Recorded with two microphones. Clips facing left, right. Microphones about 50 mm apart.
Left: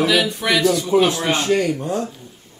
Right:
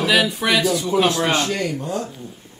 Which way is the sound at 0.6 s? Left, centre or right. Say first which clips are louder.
Left 3 dB; centre.